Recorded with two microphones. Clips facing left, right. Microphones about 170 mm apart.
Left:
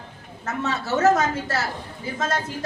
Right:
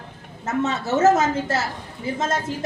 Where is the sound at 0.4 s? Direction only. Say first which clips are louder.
Right 4 dB; 25° right (ahead or behind).